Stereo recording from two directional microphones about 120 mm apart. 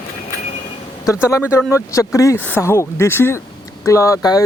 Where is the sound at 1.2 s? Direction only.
25° left (ahead or behind).